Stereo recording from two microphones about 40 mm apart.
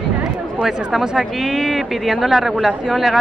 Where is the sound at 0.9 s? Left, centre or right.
Centre.